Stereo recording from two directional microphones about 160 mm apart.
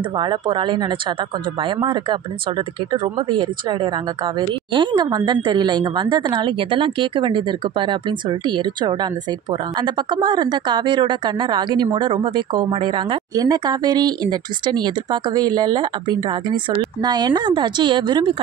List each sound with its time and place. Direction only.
0.2 s a woman's voice: 30° right (ahead or behind)